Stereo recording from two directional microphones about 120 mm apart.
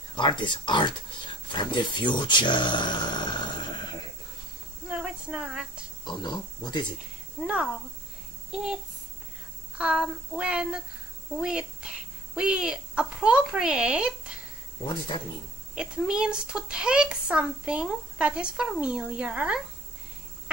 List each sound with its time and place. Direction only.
0.1 s speech: 40° left (ahead or behind)
4.8 s a sound: 10° right (ahead or behind)
6.0 s speech: 40° left (ahead or behind)
7.4 s a child's voice: 10° right (ahead or behind)
9.8 s speech: 5° right (ahead or behind)
14.9 s speech: 45° left (ahead or behind)
15.7 s speech: 5° right (ahead or behind)